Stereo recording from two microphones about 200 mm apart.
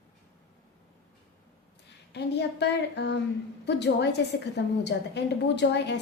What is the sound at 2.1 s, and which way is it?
A woman's voice, 60° left (ahead or behind).